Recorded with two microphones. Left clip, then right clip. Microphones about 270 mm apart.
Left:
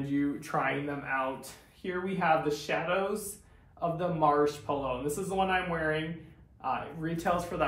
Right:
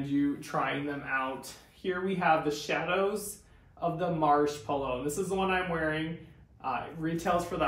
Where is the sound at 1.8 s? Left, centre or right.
Centre.